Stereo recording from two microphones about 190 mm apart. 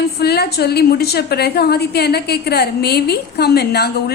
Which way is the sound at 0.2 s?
55° left (ahead or behind).